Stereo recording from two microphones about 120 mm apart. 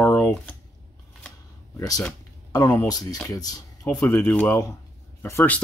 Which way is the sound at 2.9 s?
30° left (ahead or behind).